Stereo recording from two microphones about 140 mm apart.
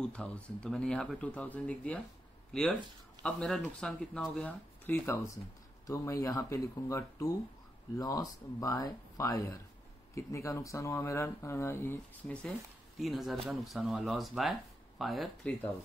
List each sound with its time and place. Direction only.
0.0 s speech: 10° left (ahead or behind)